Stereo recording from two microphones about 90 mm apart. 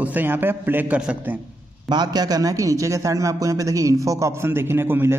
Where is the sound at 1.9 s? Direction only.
50° right (ahead or behind).